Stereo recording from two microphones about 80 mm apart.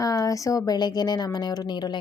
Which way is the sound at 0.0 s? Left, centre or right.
Left.